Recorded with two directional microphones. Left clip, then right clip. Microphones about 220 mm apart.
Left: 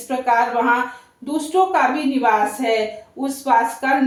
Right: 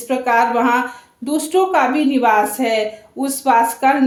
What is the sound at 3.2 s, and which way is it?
Speech, 50° right (ahead or behind).